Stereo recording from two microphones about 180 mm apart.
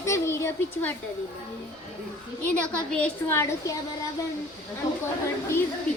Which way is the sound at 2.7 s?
10° left (ahead or behind).